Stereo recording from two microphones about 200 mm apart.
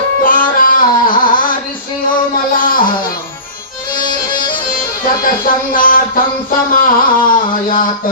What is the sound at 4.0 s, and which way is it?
Music, 45° left (ahead or behind).